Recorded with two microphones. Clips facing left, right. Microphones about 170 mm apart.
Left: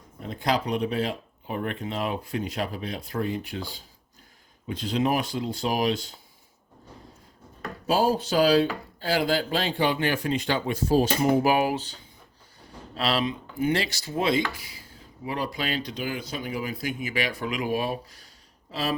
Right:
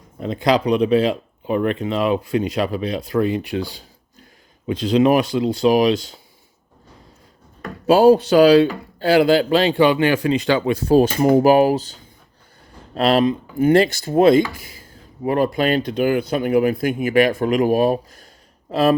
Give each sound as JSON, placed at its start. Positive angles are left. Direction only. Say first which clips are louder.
{"t": 0.2, "sound": "speech", "louder": "right 8 dB", "side_deg": -90}
{"t": 7.9, "sound": "a man's voice", "louder": "right 11 dB", "side_deg": -70}
{"t": 11.3, "sound": "speech", "louder": "right 11 dB", "side_deg": -40}
{"t": 13.0, "sound": "speech", "louder": "right 10 dB", "side_deg": -50}